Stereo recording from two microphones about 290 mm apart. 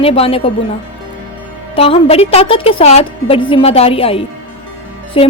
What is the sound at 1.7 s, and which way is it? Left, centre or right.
A woman's voice, centre.